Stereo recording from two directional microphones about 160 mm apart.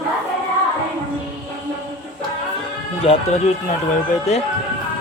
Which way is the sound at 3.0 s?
35° left (ahead or behind).